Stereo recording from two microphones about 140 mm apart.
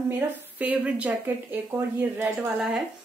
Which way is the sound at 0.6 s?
10° right (ahead or behind).